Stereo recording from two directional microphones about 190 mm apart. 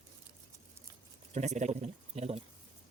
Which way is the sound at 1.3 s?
35° right (ahead or behind).